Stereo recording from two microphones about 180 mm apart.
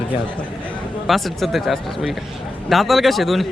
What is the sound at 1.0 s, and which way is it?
Speech, centre (ahead or behind).